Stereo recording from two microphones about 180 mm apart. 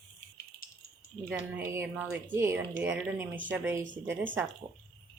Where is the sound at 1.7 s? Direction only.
10° right (ahead or behind).